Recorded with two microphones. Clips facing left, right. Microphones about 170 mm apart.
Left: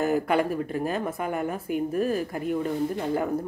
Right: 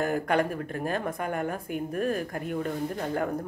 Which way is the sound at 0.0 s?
5° left (ahead or behind).